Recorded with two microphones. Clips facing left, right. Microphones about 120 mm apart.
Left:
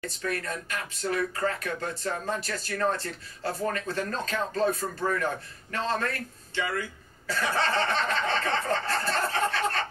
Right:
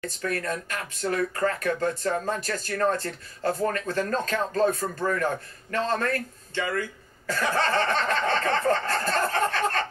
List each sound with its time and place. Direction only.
0.2 s speech: 45° right (ahead or behind)